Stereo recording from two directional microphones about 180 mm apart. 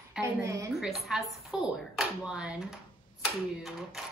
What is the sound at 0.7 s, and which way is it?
Speech, centre (ahead or behind).